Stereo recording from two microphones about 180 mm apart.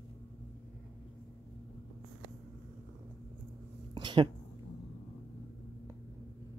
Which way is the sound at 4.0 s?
25° right (ahead or behind).